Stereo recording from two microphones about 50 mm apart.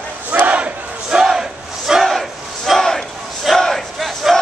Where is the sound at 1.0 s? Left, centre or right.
Centre.